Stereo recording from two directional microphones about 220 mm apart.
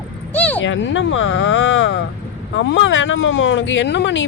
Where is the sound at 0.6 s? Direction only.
55° left (ahead or behind).